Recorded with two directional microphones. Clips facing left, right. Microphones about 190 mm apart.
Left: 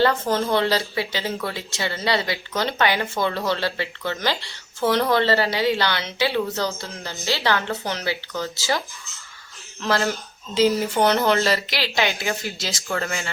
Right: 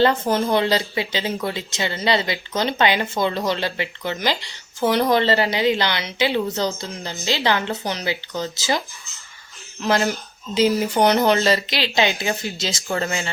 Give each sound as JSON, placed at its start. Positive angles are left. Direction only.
{"t": 0.0, "sound": "speech", "side_deg": -20}
{"t": 9.8, "sound": "speech", "side_deg": -20}